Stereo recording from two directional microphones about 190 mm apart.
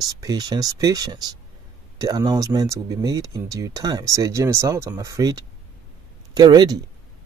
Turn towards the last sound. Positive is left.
turn(degrees=-20)  # may be behind; listen again after turning